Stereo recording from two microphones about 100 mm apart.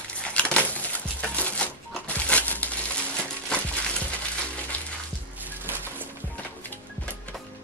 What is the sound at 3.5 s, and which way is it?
Music, 10° left (ahead or behind).